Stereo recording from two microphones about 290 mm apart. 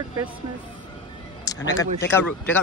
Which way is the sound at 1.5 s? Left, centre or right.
Centre.